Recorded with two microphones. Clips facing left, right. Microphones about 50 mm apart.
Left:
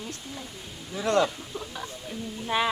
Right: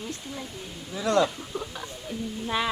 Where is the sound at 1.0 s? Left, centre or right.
Left.